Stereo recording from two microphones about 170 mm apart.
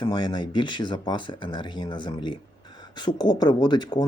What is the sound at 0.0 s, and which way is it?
Speech, 25° left (ahead or behind).